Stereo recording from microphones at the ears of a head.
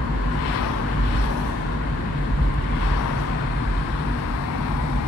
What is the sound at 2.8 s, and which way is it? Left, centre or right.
Vehicle, left.